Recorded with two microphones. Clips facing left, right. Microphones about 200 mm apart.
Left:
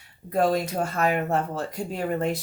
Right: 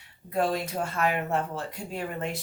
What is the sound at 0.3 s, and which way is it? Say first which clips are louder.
Speech: left 4 dB; 40° left (ahead or behind).